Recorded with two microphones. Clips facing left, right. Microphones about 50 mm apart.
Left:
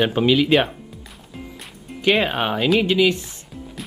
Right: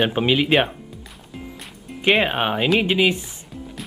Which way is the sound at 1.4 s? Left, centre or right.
Centre.